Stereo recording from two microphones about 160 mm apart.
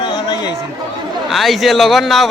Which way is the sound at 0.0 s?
25° left (ahead or behind).